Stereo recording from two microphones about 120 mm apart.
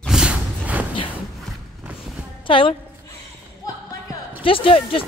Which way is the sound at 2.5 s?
45° left (ahead or behind).